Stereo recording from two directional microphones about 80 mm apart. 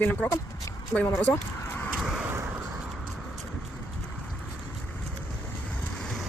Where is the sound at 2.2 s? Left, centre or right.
Right.